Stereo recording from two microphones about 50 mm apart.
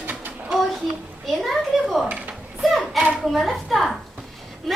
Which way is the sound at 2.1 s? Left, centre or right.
Right.